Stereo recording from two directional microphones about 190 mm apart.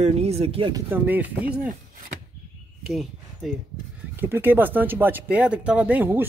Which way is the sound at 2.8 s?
Centre (ahead or behind).